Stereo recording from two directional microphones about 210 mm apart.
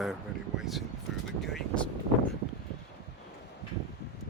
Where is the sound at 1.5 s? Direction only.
5° left (ahead or behind).